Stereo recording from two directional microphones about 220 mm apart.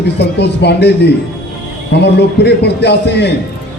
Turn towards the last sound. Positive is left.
turn(degrees=50)  # may be behind; listen again after turning